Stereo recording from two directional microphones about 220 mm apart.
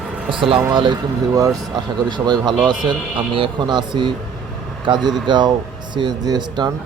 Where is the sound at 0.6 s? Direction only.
20° right (ahead or behind).